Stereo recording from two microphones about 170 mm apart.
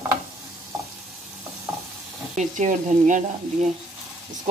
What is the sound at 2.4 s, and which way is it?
Speech, 45° right (ahead or behind).